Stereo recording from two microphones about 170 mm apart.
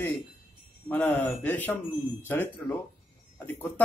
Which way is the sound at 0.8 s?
10° left (ahead or behind).